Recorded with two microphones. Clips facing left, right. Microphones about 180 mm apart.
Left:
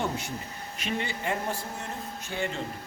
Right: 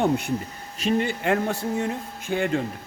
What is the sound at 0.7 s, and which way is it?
Speech, 40° right (ahead or behind).